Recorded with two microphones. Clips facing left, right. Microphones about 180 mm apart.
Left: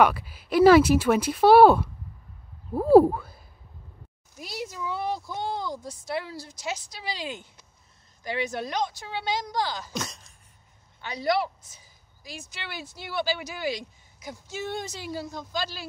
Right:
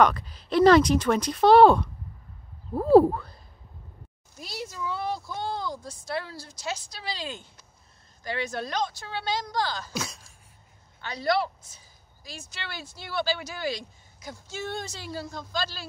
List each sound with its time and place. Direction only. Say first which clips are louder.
0.0 s speech: even; 5° left (ahead or behind)
9.9 s a sound: even; centre (ahead or behind)
11.0 s speech: even; 15° left (ahead or behind)